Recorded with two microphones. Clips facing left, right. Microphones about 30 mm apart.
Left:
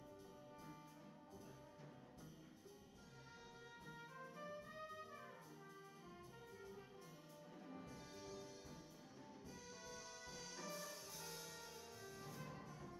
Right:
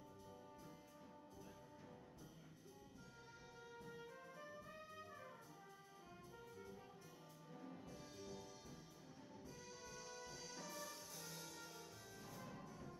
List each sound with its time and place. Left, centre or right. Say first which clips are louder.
3.8 s music: left 1 dB; centre
7.6 s music: even; centre
9.6 s music: left 1 dB; centre